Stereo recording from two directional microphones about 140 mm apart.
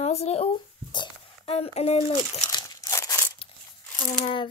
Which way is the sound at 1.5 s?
45° left (ahead or behind).